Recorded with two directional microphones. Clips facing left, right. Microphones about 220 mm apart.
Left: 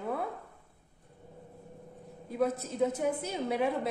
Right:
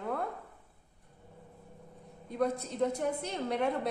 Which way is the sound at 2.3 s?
5° left (ahead or behind).